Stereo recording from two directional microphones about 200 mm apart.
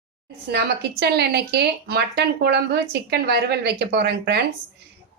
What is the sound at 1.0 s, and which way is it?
Speech, 55° right (ahead or behind).